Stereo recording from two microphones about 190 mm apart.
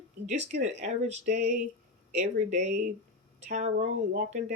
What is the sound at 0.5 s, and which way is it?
Speech, 35° right (ahead or behind).